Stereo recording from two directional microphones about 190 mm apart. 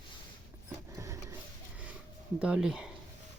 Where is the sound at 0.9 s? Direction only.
15° right (ahead or behind).